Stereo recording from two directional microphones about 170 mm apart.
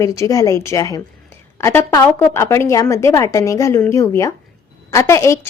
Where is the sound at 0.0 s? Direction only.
20° left (ahead or behind).